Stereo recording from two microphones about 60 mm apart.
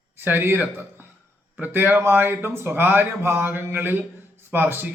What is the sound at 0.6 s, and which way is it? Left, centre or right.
Speech, right.